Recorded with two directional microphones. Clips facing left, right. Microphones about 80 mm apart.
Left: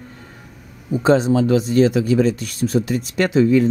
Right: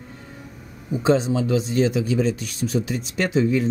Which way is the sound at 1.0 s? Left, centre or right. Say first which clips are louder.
Left 4 dB; left.